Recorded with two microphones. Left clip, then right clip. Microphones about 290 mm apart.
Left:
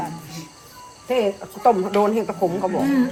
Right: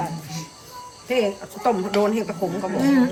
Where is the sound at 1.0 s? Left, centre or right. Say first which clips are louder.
Left 1 dB; centre.